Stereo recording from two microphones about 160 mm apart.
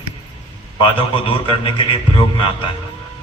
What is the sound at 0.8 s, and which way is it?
A man's voice, 35° left (ahead or behind).